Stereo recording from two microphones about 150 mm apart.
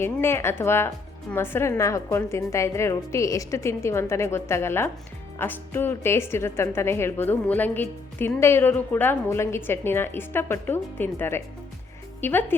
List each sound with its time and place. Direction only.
0.0 s a woman's voice: 15° left (ahead or behind)